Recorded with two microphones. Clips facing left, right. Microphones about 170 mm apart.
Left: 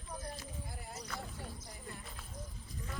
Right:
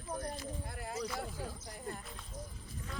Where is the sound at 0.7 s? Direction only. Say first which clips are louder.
Right 5 dB; 75° right (ahead or behind).